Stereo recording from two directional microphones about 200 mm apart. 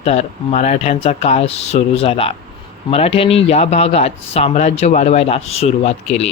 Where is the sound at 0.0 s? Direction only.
30° left (ahead or behind).